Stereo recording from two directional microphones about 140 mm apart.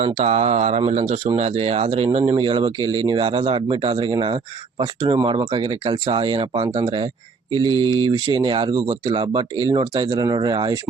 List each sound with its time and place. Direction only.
0.0 s speech: 50° right (ahead or behind); by 10.8 s 30° right (ahead or behind)